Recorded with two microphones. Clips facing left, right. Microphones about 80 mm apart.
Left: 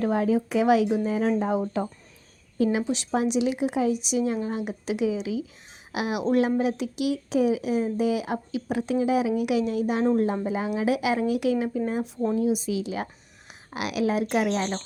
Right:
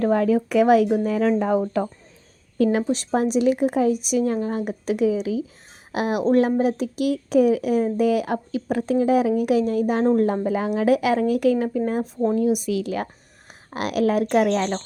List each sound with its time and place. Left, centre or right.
0.0 s speech: right
1.0 s a woman's voice: right
2.9 s speech: right
12.4 s a woman's voice: right